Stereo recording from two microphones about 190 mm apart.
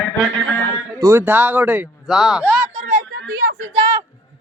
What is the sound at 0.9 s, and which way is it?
Speech, 15° right (ahead or behind).